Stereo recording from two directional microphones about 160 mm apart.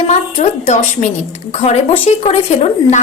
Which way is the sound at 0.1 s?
50° left (ahead or behind).